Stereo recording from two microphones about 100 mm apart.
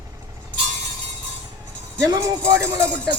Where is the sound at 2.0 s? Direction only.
35° right (ahead or behind).